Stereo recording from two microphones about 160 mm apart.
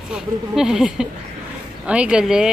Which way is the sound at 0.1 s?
5° right (ahead or behind).